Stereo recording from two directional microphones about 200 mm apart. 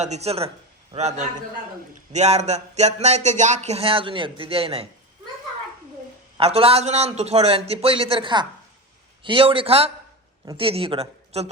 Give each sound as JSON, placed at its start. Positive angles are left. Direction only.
{"t": 0.0, "sound": "speech", "side_deg": -35}
{"t": 6.3, "sound": "speech", "side_deg": -30}